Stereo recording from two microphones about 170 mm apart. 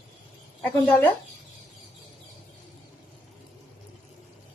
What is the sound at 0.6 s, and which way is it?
Speech, 10° left (ahead or behind).